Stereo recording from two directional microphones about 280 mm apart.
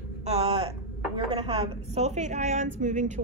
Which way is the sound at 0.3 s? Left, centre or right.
Right.